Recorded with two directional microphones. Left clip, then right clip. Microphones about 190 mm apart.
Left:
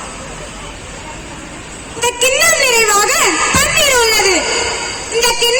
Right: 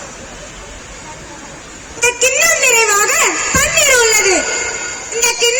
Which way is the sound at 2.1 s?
20° right (ahead or behind).